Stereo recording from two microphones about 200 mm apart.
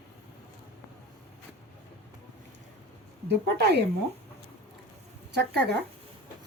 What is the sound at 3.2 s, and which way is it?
Speech, 55° right (ahead or behind).